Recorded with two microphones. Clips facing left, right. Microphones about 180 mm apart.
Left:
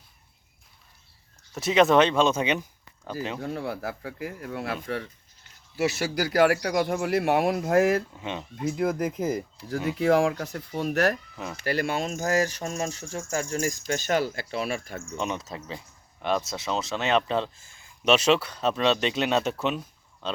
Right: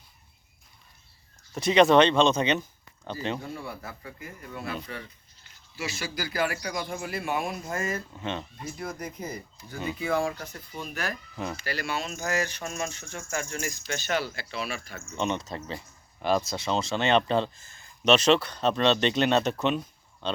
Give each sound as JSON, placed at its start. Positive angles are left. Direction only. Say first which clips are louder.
{"t": 1.5, "sound": "speech", "louder": "right 1 dB", "side_deg": 5}
{"t": 3.4, "sound": "speech", "louder": "left 7 dB", "side_deg": 70}
{"t": 5.7, "sound": "speech", "louder": "left 8 dB", "side_deg": 65}
{"t": 8.2, "sound": "speech", "louder": "right 1 dB", "side_deg": 10}
{"t": 8.6, "sound": "speech", "louder": "left 15 dB", "side_deg": 85}
{"t": 11.5, "sound": "speech", "louder": "left 8 dB", "side_deg": 50}
{"t": 15.1, "sound": "speech", "louder": "right 2 dB", "side_deg": 5}